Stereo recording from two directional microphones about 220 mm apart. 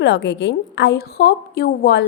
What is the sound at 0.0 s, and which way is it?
A woman's voice, 55° left (ahead or behind).